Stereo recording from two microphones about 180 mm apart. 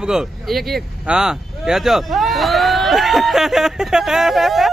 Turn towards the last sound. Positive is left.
turn(degrees=0)  # may be behind; listen again after turning